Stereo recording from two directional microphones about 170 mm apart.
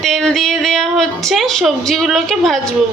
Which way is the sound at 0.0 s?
Centre (ahead or behind).